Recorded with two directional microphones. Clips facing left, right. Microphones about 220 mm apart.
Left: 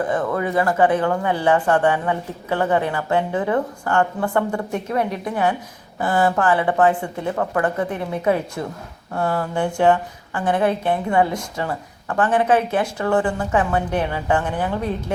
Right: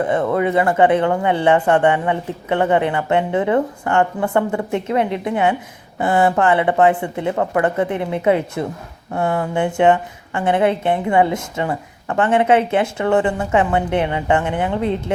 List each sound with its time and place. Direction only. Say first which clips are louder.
0.1 s a woman's voice: right 4 dB; 25° right (ahead or behind)